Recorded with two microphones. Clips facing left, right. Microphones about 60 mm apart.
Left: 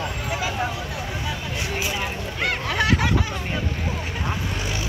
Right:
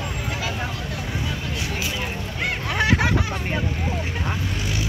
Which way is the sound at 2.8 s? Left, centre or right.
Right.